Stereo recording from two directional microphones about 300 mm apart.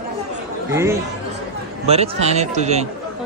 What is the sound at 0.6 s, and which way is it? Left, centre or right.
Speech, centre.